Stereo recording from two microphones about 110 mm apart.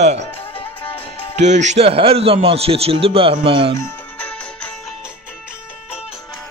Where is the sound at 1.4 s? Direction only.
90° right; by 3.7 s 55° right (ahead or behind).